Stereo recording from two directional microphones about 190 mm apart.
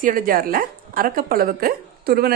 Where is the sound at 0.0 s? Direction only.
50° right (ahead or behind).